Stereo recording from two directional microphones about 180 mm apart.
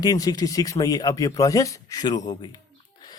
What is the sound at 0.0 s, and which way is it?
A man's voice, 20° left (ahead or behind).